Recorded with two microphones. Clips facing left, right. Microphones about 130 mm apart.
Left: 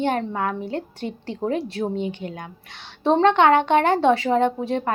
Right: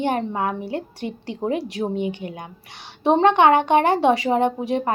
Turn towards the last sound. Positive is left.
turn(degrees=-15)  # may be behind; listen again after turning